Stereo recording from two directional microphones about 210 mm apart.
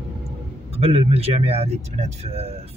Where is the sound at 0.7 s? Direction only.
30° right (ahead or behind).